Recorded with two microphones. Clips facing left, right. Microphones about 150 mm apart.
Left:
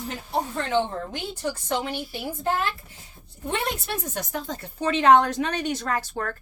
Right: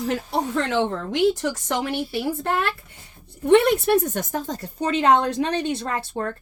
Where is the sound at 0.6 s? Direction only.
80° right.